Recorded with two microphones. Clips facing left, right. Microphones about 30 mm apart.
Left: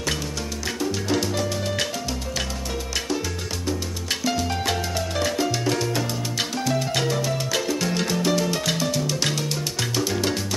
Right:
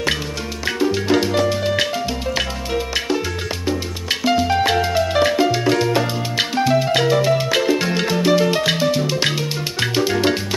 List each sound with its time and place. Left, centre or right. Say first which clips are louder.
0.7 s salsa music: right 8 dB; right
2.3 s music: right 7 dB; right